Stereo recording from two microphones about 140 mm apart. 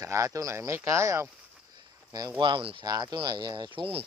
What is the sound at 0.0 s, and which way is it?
Speech, 25° right (ahead or behind).